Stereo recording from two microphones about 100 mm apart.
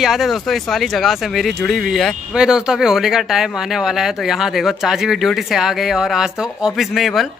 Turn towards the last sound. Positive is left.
turn(degrees=0)  # may be behind; listen again after turning